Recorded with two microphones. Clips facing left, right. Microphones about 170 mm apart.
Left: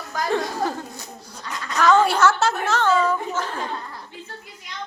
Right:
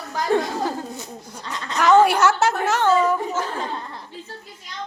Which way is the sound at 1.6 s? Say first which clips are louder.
Right 2 dB; 25° right (ahead or behind).